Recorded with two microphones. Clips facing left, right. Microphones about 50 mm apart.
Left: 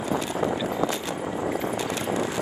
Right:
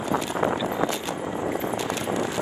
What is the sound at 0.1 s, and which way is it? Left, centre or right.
Clip-clop, right.